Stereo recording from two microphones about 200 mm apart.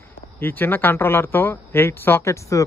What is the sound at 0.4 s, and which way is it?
Speech, 10° left (ahead or behind).